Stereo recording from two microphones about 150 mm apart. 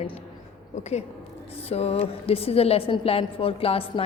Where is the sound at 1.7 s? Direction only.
45° left (ahead or behind).